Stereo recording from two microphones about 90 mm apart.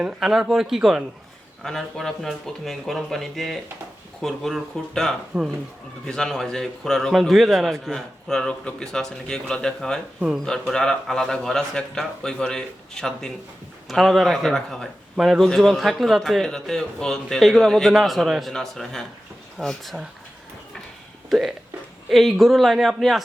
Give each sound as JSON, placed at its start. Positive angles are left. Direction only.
{"t": 0.0, "sound": "a man's voice", "side_deg": -5}
{"t": 10.2, "sound": "speech", "side_deg": -5}
{"t": 10.4, "sound": "a man's voice", "side_deg": 10}
{"t": 21.2, "sound": "a man's voice", "side_deg": 0}